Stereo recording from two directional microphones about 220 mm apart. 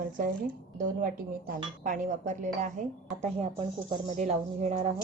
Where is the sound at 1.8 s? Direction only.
35° right (ahead or behind).